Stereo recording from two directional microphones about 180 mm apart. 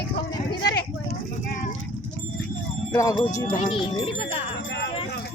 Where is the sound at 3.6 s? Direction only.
30° left (ahead or behind).